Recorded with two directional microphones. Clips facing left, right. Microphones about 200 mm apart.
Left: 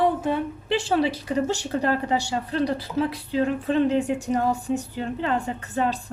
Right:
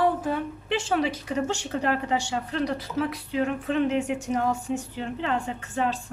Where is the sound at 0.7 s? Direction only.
35° left (ahead or behind).